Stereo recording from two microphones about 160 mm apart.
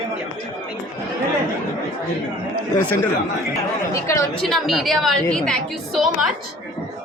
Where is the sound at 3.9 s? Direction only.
20° left (ahead or behind).